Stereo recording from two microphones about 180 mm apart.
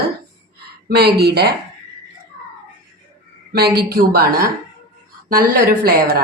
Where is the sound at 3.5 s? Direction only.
60° right (ahead or behind).